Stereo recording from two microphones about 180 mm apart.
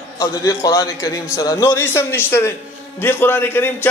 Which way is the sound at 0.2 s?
20° left (ahead or behind).